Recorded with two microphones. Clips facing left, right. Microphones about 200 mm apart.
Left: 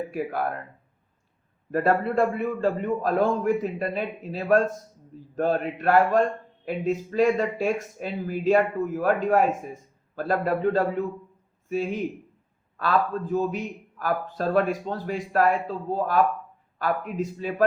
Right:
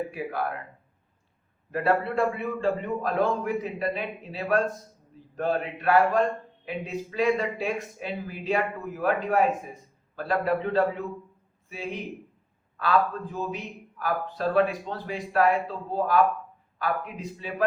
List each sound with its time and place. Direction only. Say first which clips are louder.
1.7 s a man's voice: left 2 dB; 45° left (ahead or behind)